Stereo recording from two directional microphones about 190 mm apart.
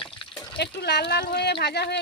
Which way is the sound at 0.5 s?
60° left (ahead or behind).